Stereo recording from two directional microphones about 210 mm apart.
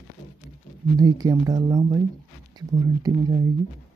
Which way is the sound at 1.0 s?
15° right (ahead or behind).